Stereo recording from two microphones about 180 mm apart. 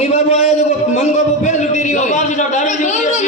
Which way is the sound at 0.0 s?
35° left (ahead or behind).